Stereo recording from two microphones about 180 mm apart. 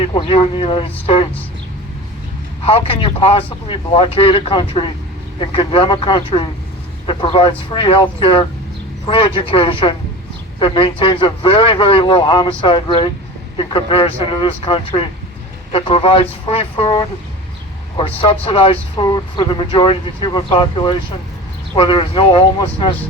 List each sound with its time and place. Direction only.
0.0 s speech: 30° left (ahead or behind)
2.6 s speech: 30° left (ahead or behind)